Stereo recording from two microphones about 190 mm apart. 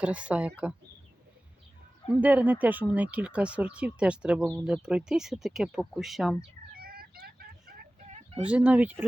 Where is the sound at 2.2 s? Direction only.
10° right (ahead or behind).